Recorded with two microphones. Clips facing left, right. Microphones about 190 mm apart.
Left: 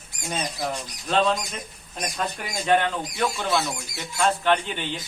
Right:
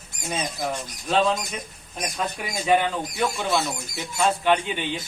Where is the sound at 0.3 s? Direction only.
5° right (ahead or behind).